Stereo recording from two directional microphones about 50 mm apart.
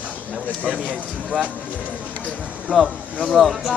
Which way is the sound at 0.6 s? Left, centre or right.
Right.